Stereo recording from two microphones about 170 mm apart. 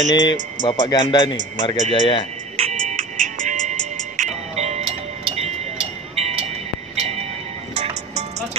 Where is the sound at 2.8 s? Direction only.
45° right (ahead or behind).